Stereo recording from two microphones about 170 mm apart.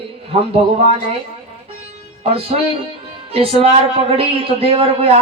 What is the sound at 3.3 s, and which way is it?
A woman's voice, 35° right (ahead or behind).